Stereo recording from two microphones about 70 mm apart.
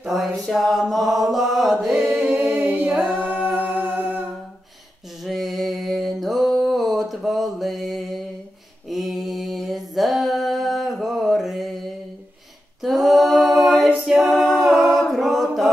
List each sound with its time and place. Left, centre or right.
0.0 s mantra: centre
2.0 s a capella: centre
3.0 s a capella: centre
3.4 s music: right
5.2 s music: centre
8.8 s a sound: centre
12.8 s a capella: centre
14.3 s a capella: centre